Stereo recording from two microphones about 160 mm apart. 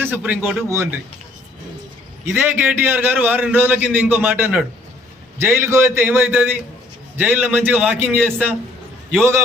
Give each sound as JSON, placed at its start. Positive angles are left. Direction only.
{"t": 0.0, "sound": "a man's voice", "side_deg": -10}
{"t": 2.3, "sound": "a man's voice", "side_deg": -10}